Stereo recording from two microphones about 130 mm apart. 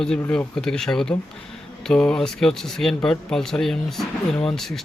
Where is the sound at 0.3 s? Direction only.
5° left (ahead or behind).